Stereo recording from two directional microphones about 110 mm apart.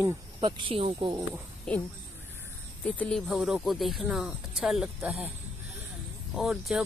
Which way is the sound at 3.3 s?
5° right (ahead or behind).